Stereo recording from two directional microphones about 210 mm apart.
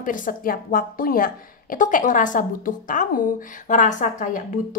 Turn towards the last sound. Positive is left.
turn(degrees=35)  # may be behind; listen again after turning